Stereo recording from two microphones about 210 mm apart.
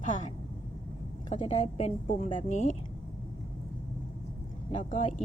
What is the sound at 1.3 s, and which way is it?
A woman's voice, 30° left (ahead or behind).